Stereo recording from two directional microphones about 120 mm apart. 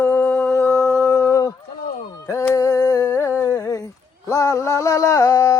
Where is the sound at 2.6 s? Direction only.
25° left (ahead or behind).